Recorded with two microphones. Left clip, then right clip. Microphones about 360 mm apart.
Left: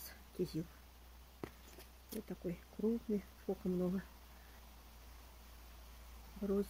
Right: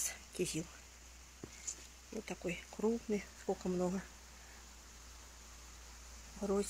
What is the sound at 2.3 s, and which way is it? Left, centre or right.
Speech, right.